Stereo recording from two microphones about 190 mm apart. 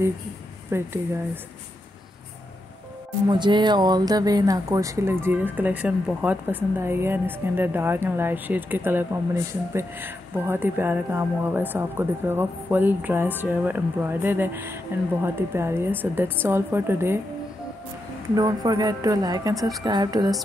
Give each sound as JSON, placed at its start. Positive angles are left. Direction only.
{"t": 0.7, "sound": "speech", "side_deg": -15}
{"t": 3.3, "sound": "speech", "side_deg": -25}
{"t": 18.3, "sound": "a woman's voice", "side_deg": -20}